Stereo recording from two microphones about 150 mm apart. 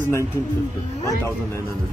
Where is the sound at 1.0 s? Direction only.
20° left (ahead or behind).